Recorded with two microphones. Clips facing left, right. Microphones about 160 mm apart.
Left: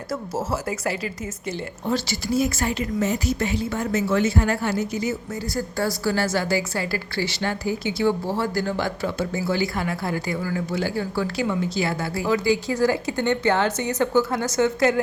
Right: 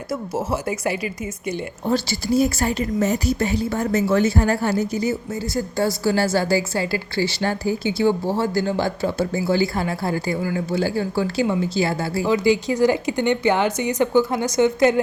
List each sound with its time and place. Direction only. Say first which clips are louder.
0.5 s speech: right 3 dB; 20° right (ahead or behind)
1.9 s speech: right 3 dB; 35° right (ahead or behind); by 15.0 s 20° right (ahead or behind)